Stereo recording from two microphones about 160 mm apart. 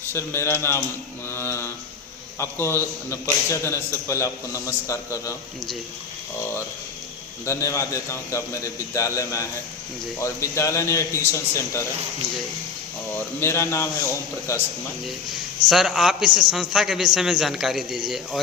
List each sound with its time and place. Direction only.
0.1 s a man's voice: 15° left (ahead or behind)
1.3 s mantra: 15° left (ahead or behind)
2.4 s a man's voice: 15° left (ahead or behind)
7.4 s a man's voice: 20° left (ahead or behind)
13.4 s a man's voice: 15° left (ahead or behind)
15.7 s a man's voice: 5° right (ahead or behind)